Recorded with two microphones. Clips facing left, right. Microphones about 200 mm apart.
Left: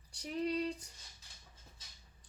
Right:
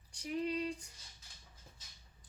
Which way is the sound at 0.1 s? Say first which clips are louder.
Left 1 dB; 35° left (ahead or behind).